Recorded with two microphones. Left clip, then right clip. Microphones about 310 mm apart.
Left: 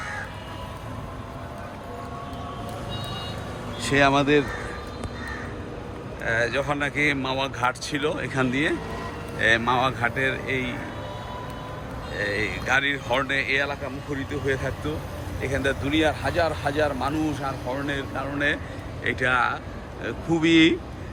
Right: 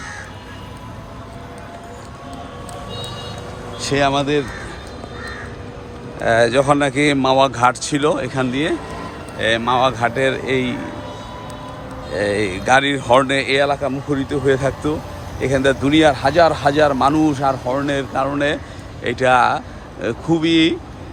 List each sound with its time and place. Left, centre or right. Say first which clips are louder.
3.8 s speech: right 3 dB; centre
6.2 s speech: right 10 dB; centre
12.1 s speech: right 7 dB; centre